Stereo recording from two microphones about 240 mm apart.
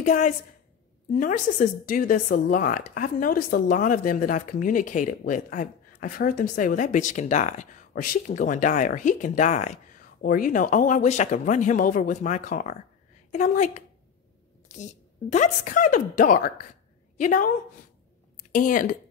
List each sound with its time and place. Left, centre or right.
0.0 s a woman's voice: left
18.5 s speech: left